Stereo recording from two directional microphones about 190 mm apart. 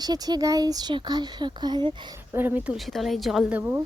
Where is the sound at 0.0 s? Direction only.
20° right (ahead or behind).